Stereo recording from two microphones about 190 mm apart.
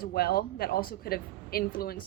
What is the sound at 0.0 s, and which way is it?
A woman's voice, 55° left (ahead or behind).